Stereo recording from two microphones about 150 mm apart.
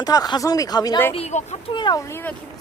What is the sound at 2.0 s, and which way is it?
Speech, 15° left (ahead or behind).